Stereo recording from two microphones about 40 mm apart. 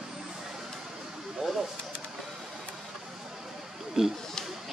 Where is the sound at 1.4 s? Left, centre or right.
Centre.